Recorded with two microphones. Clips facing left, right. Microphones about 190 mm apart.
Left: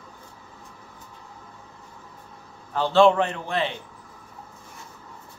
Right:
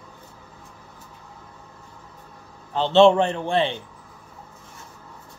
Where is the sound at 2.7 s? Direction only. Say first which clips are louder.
Right 3 dB; 25° right (ahead or behind).